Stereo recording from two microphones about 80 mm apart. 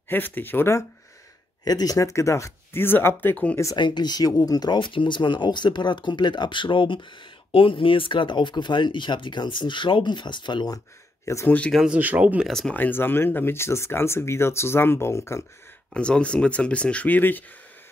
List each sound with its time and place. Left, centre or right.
0.1 s speech: left
1.6 s speech: left
3.7 s speech: left
4.7 s speech: left
11.4 s speech: centre
11.9 s speech: centre
12.4 s speech: centre
12.7 s speech: left
15.9 s speech: centre